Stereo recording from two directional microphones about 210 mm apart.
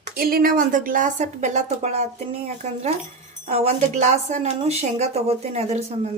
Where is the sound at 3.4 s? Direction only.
30° right (ahead or behind).